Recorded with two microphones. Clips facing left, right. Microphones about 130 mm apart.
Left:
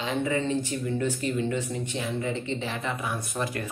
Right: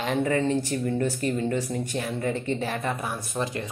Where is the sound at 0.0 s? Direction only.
50° right (ahead or behind).